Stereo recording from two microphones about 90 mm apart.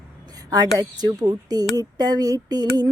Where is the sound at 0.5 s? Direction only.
45° right (ahead or behind).